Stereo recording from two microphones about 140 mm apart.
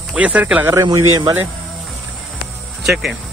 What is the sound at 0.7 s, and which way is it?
Speech, 20° right (ahead or behind).